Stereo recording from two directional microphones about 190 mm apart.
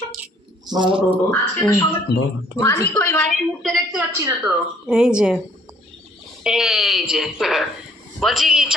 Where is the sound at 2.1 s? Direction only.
60° left (ahead or behind).